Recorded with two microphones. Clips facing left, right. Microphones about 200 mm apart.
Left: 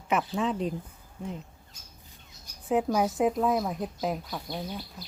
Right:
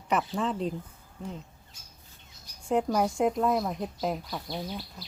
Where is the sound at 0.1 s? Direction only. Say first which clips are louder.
Left 1 dB; centre (ahead or behind).